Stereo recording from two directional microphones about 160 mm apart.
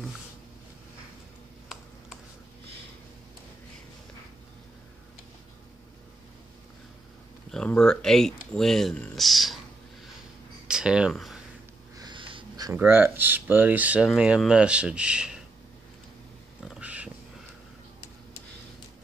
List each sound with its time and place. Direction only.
7.5 s speech: 5° left (ahead or behind)
10.7 s speech: 5° right (ahead or behind)
12.0 s wheeze: 30° right (ahead or behind)
12.7 s speech: 10° right (ahead or behind)
16.6 s a sound: 5° right (ahead or behind)